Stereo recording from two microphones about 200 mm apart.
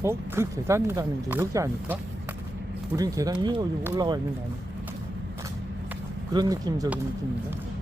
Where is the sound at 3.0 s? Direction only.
15° right (ahead or behind).